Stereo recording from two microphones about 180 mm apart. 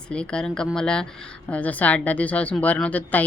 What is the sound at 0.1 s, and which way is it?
Speech, 5° left (ahead or behind).